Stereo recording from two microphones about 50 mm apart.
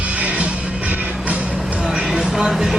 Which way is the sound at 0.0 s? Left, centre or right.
Right.